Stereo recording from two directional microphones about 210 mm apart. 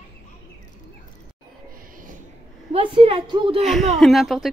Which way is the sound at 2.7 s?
25° right (ahead or behind).